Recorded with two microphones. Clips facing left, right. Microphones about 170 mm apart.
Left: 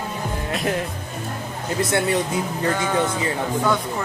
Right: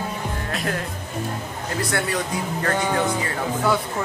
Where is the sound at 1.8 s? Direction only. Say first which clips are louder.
Left 5 dB; 20° left (ahead or behind).